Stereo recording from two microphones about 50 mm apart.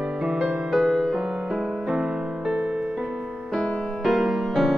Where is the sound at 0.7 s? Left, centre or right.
Centre.